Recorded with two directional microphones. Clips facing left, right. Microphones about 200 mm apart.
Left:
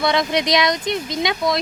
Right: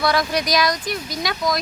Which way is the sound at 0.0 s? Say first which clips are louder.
Left 1 dB; 20° left (ahead or behind).